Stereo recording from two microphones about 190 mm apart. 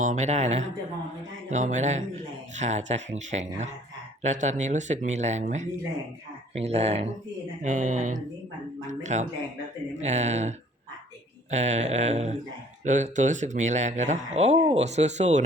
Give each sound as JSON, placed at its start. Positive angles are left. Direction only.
{"t": 0.0, "sound": "speech", "side_deg": -40}
{"t": 11.5, "sound": "speech", "side_deg": -40}